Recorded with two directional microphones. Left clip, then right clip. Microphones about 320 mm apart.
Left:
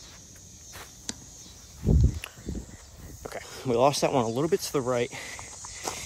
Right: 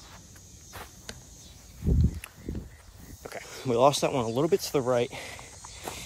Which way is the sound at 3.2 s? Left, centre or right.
Centre.